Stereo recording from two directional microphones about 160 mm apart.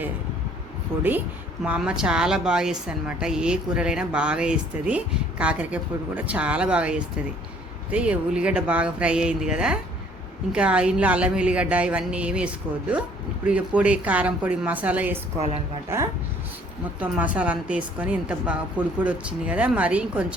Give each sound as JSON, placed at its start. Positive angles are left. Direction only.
{"t": 0.9, "sound": "a woman's voice", "side_deg": -15}
{"t": 15.4, "sound": "a woman's voice", "side_deg": -40}
{"t": 15.9, "sound": "a woman's voice", "side_deg": -15}